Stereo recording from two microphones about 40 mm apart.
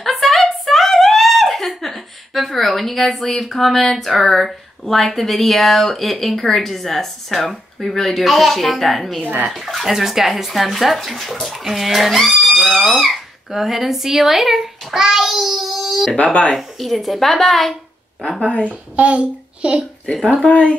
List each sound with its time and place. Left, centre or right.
0.0 s speech: centre
18.4 s a woman's voice: left
18.7 s a child's voice: right
20.4 s speech: left